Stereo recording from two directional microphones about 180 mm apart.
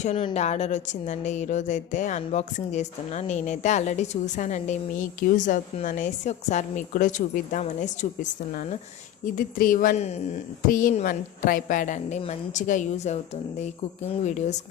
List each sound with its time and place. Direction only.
0.0 s a woman's voice: 40° left (ahead or behind)